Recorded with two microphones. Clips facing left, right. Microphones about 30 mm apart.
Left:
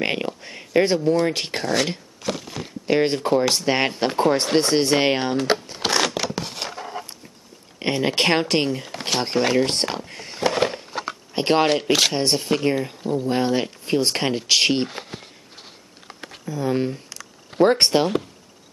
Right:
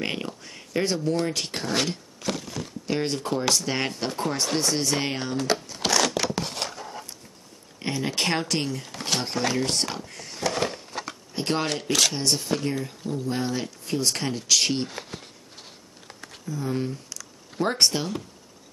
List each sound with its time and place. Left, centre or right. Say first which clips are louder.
0.0 s speech: left 6 dB; left
5.4 s a sound: left 4 dB; left
6.1 s a sound: even; centre
6.7 s dog: left 5 dB; left
7.8 s speech: left 6 dB; left
9.2 s a sound: left 9 dB; left
11.3 s speech: left 8 dB; left
12.2 s speech: left 5 dB; left; by 15.2 s centre
16.4 s speech: left 6 dB; left